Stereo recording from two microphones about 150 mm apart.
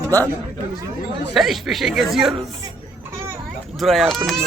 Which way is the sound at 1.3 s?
Centre (ahead or behind).